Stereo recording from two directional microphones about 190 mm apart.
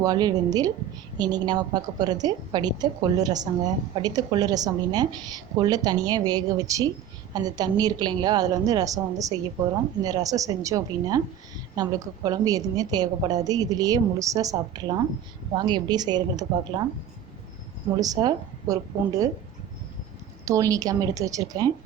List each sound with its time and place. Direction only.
0.0 s a woman's voice: 20° right (ahead or behind)
18.0 s a woman's voice: 20° right (ahead or behind)
20.4 s a woman's voice: 15° right (ahead or behind)